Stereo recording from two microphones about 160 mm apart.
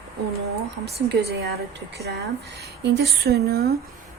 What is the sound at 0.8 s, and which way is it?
Speech, 90° right.